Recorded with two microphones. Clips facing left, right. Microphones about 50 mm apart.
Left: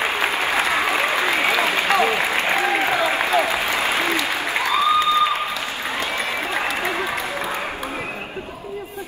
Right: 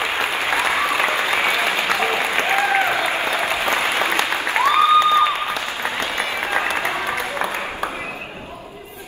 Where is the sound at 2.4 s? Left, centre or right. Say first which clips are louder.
Right 2 dB; right.